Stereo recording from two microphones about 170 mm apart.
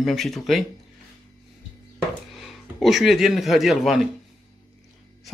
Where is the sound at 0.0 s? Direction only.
Centre (ahead or behind).